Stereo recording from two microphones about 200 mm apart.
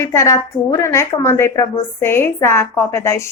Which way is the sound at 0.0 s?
15° left (ahead or behind).